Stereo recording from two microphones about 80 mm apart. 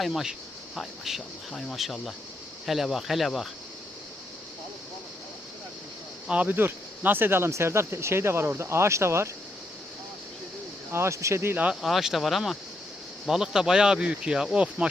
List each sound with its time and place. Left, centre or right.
0.0 s speech: centre
6.2 s speech: centre; by 9.3 s right
10.9 s speech: right
11.5 s speech: centre
11.8 s speech: centre